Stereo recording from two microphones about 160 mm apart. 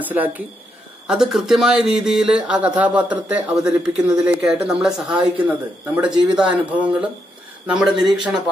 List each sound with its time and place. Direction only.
0.0 s speech: 10° right (ahead or behind)